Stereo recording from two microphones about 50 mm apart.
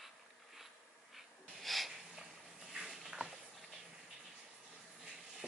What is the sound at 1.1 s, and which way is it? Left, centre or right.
Snort, centre.